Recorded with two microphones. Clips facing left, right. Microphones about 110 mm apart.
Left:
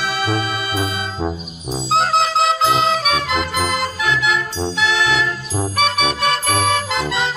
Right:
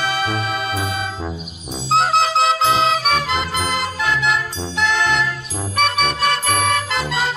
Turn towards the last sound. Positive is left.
turn(degrees=0)  # may be behind; listen again after turning